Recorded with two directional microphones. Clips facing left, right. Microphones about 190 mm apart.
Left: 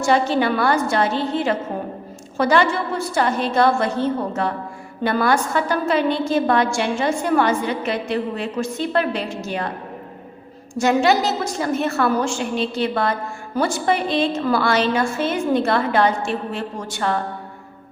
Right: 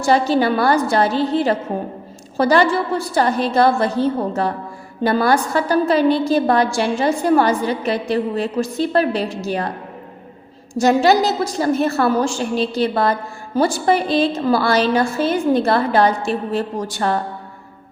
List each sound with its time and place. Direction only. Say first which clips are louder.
0.0 s a woman's voice: right 2 dB; 35° right (ahead or behind)
10.8 s a woman's voice: right 3 dB; 35° right (ahead or behind)